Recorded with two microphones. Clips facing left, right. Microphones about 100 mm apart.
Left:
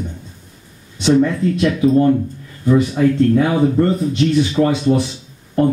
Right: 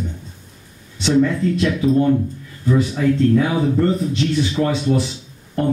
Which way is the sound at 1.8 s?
30° left (ahead or behind).